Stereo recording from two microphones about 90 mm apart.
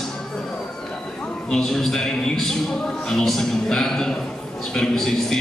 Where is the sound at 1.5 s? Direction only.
5° left (ahead or behind).